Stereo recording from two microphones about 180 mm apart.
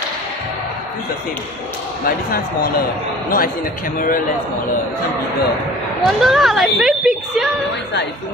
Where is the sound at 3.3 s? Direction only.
50° left (ahead or behind).